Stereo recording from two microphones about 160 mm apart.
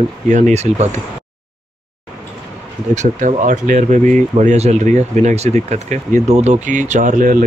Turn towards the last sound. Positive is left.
turn(degrees=-55)  # may be behind; listen again after turning